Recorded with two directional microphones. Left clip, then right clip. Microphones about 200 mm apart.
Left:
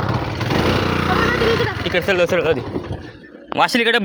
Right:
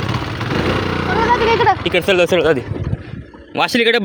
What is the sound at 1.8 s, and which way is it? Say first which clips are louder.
Speech: right 3 dB; 35° right (ahead or behind).